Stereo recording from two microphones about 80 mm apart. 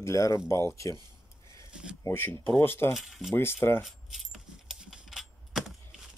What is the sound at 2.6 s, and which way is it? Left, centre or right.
Speech, left.